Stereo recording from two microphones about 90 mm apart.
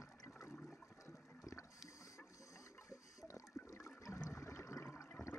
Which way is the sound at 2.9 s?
35° left (ahead or behind).